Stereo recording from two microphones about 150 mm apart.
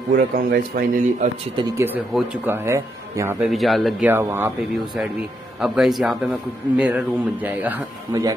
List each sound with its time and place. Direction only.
0.1 s speech: 70° right (ahead or behind)
1.6 s speech: 35° right (ahead or behind)
2.4 s speech: 15° right (ahead or behind)
3.4 s speech: centre (ahead or behind)
4.0 s speech: 15° right (ahead or behind)
5.6 s speech: centre (ahead or behind)
8.1 s speech: 25° right (ahead or behind)